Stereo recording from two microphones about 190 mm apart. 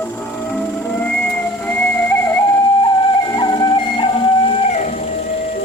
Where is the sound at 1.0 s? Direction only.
10° left (ahead or behind).